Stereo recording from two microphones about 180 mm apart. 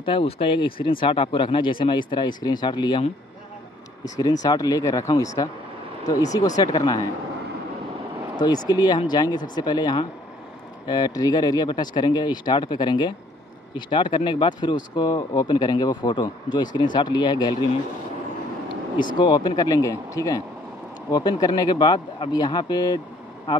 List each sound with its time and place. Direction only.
0.0 s speech: 30° left (ahead or behind)
4.2 s speech: 20° left (ahead or behind)
8.4 s speech: 20° left (ahead or behind)
19.1 s speech: 25° left (ahead or behind)